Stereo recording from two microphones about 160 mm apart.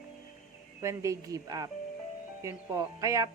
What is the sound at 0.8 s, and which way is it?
Speech, 20° right (ahead or behind).